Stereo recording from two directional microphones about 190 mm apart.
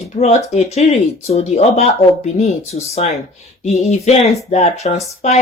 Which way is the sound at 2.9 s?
35° left (ahead or behind).